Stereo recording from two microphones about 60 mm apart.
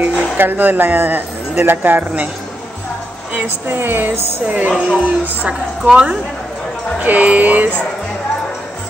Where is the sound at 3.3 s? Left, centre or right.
Right.